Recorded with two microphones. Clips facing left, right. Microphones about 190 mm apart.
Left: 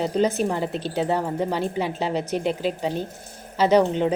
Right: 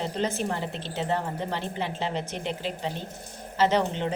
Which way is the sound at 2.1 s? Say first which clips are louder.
Left 7 dB; 10° left (ahead or behind).